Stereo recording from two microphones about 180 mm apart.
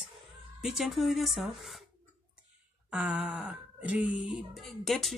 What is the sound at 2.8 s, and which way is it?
Speech, 5° right (ahead or behind).